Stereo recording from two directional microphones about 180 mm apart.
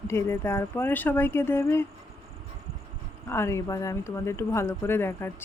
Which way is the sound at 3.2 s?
15° left (ahead or behind).